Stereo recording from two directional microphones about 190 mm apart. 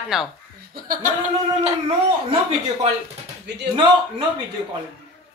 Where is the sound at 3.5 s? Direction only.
60° right (ahead or behind).